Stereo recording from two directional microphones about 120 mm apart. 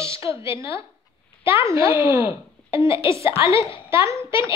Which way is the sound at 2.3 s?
45° left (ahead or behind).